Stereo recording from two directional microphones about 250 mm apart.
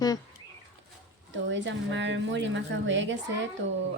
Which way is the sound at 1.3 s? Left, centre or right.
Right.